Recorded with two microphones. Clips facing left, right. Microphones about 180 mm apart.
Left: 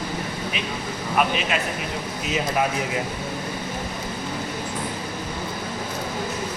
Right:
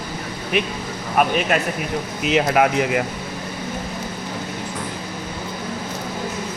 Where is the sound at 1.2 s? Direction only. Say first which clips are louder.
Right 5 dB; 45° right (ahead or behind).